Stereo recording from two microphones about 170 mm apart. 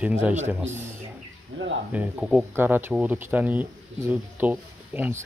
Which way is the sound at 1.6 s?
90° right.